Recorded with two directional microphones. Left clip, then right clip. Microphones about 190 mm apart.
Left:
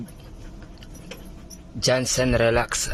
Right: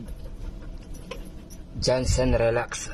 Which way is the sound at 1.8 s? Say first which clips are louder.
Left 2 dB; 10° left (ahead or behind).